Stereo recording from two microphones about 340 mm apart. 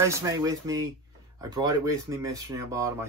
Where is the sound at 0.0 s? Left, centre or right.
Centre.